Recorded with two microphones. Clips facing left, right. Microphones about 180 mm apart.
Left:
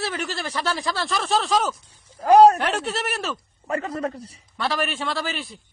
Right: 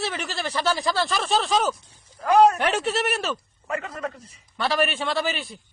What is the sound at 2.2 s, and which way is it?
Speech, 35° left (ahead or behind).